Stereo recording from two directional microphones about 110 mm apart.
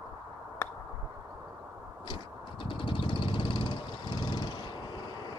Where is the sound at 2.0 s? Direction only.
50° left (ahead or behind).